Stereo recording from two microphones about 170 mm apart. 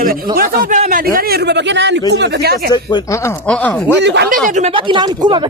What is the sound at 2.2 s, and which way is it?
Speech, 70° right (ahead or behind).